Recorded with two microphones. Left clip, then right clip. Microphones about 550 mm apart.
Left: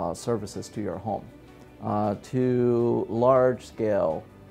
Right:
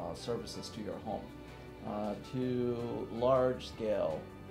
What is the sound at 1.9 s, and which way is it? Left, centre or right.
Speech, left.